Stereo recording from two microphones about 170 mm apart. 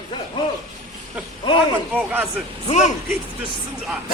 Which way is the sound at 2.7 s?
40° left (ahead or behind).